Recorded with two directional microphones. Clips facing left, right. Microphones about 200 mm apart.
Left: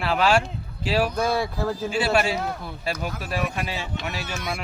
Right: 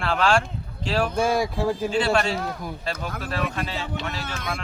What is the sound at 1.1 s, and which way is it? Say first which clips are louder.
Speech: right 2 dB; 10° right (ahead or behind).